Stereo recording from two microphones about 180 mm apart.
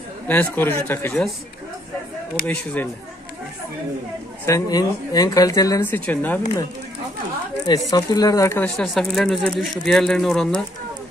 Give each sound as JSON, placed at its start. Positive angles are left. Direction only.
{"t": 0.3, "sound": "speech", "side_deg": 10}
{"t": 2.4, "sound": "speech", "side_deg": 10}
{"t": 4.5, "sound": "speech", "side_deg": 20}
{"t": 7.9, "sound": "speech", "side_deg": 20}
{"t": 8.6, "sound": "speech", "side_deg": 0}